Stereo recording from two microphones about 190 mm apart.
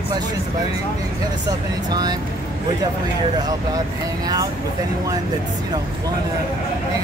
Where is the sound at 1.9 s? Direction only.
20° right (ahead or behind).